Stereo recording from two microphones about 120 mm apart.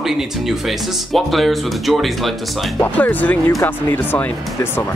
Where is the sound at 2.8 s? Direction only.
15° left (ahead or behind).